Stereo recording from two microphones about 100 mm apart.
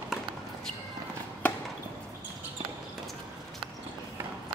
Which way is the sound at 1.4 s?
15° left (ahead or behind).